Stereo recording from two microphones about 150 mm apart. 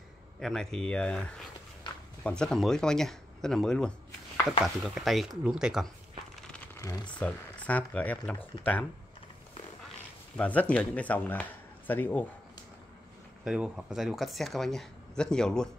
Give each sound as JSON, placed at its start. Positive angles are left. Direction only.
{"t": 0.4, "sound": "speech", "side_deg": 5}
{"t": 6.8, "sound": "speech", "side_deg": 25}
{"t": 7.2, "sound": "speech", "side_deg": 10}
{"t": 10.3, "sound": "speech", "side_deg": 10}
{"t": 13.4, "sound": "speech", "side_deg": -5}